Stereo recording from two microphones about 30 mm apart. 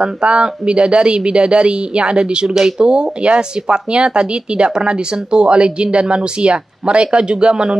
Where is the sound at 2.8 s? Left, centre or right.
Right.